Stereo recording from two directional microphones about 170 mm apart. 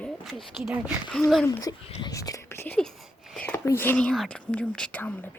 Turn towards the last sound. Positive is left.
turn(degrees=10)  # may be behind; listen again after turning